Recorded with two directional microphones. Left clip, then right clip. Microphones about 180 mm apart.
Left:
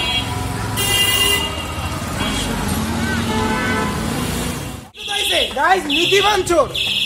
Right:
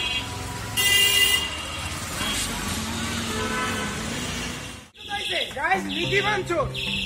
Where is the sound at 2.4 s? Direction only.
15° left (ahead or behind).